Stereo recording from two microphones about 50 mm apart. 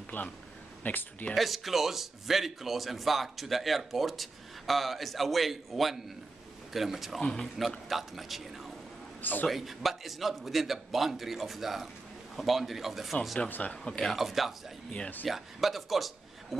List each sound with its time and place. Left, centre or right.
0.1 s speech: left
1.3 s speech: centre
7.2 s a man's voice: centre
7.9 s speech: centre
9.2 s a man's voice: left
9.5 s speech: centre
13.5 s speech: left
14.1 s speech: centre